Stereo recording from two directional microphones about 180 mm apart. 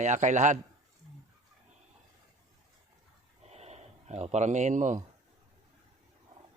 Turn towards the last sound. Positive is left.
turn(degrees=-45)  # may be behind; listen again after turning